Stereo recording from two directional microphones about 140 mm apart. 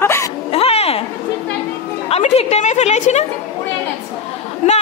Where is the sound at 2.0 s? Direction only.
45° left (ahead or behind).